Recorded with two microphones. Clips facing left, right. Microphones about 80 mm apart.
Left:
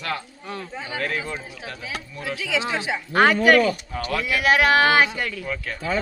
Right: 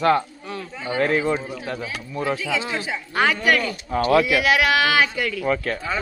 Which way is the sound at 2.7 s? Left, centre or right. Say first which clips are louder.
Left 1 dB; left.